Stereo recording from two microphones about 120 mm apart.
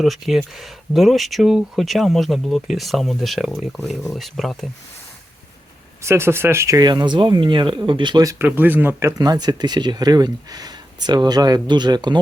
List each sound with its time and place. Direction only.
0.0 s speech: centre (ahead or behind)
6.0 s speech: 20° right (ahead or behind)
8.4 s speech: 15° right (ahead or behind); by 12.2 s 35° right (ahead or behind)